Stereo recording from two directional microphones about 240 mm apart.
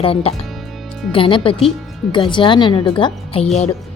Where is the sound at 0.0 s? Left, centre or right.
Left.